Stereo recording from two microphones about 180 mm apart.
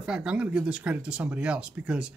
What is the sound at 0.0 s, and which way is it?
Speech, 5° right (ahead or behind).